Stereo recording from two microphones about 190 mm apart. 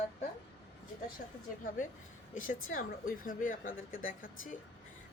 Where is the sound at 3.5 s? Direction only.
90° left.